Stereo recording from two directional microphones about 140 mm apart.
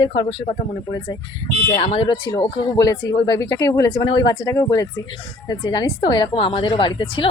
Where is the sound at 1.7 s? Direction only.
45° left (ahead or behind).